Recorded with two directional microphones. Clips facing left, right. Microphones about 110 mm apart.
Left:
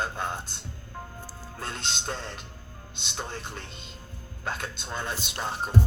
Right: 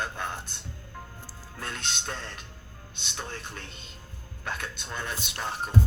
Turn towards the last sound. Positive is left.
turn(degrees=30)  # may be behind; listen again after turning